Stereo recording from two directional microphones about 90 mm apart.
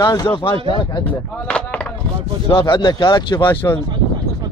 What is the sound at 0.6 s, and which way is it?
Speech, 55° left (ahead or behind).